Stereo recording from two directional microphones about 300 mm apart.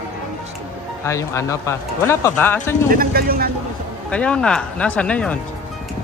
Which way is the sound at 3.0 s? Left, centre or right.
Right.